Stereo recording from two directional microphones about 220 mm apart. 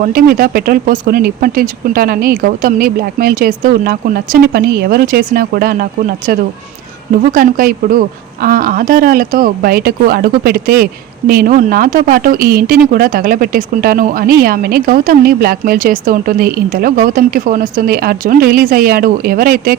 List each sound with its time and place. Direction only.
0.0 s speech: 40° right (ahead or behind)
7.3 s speech: 40° right (ahead or behind)